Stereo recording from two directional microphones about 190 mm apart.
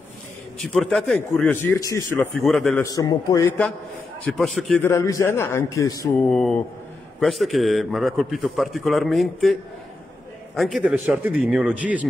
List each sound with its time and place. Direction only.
0.6 s a man's voice: centre (ahead or behind); by 2.2 s 15° left (ahead or behind)
2.3 s a man's voice: centre (ahead or behind)
2.8 s a man's voice: 20° left (ahead or behind)
4.2 s a man's voice: centre (ahead or behind)
4.8 s a man's voice: 15° left (ahead or behind)
6.1 s a man's voice: 5° left (ahead or behind)